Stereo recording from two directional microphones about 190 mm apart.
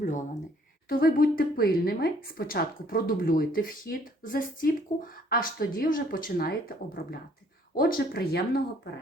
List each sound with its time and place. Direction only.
0.0 s speech: 40° left (ahead or behind)
0.9 s a woman's voice: 50° left (ahead or behind)